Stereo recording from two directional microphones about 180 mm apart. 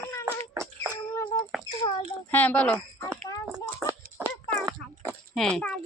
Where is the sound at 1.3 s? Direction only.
15° left (ahead or behind).